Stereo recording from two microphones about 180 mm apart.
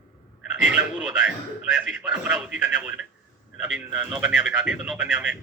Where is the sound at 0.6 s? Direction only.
5° right (ahead or behind).